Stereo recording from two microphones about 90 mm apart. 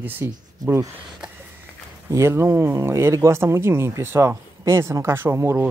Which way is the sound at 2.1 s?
30° right (ahead or behind).